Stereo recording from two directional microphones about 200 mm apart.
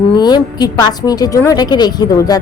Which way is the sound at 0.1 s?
20° left (ahead or behind).